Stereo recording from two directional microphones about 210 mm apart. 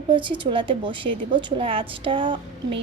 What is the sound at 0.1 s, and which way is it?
A woman's voice, 25° right (ahead or behind).